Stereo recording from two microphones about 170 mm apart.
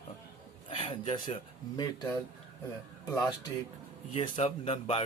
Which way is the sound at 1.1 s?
25° left (ahead or behind).